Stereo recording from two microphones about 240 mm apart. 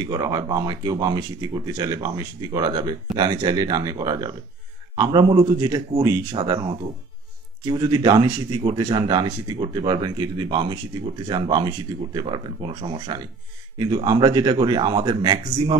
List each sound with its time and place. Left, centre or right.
0.0 s speech: centre